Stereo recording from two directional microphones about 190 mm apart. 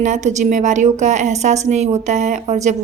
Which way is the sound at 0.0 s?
40° right (ahead or behind).